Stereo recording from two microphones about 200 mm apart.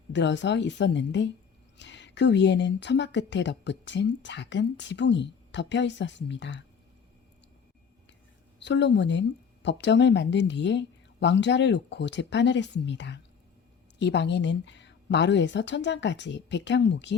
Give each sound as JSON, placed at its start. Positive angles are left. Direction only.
{"t": 0.1, "sound": "speech", "side_deg": 60}
{"t": 8.5, "sound": "speech", "side_deg": 60}